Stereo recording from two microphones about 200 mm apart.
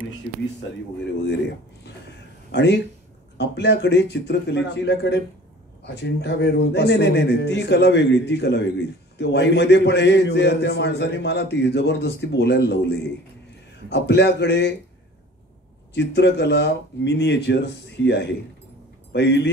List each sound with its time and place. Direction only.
2.5 s a man's voice: 60° left (ahead or behind)
15.9 s a man's voice: 55° left (ahead or behind)